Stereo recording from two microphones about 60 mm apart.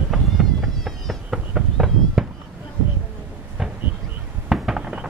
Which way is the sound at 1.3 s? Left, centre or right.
Centre.